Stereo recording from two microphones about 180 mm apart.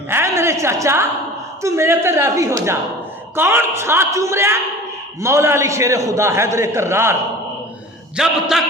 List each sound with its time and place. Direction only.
0.1 s a sound: 15° right (ahead or behind)
1.6 s a man's voice: 15° right (ahead or behind)
8.1 s a man's voice: 5° right (ahead or behind)